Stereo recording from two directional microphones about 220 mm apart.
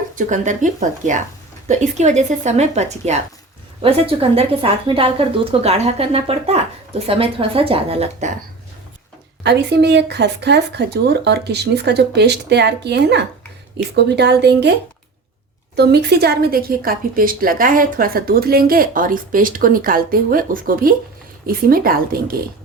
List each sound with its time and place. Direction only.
0.2 s a woman's voice: 35° right (ahead or behind)
9.4 s speech: 50° right (ahead or behind)